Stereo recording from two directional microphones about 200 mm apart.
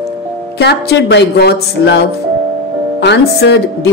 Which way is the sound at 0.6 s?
60° left (ahead or behind).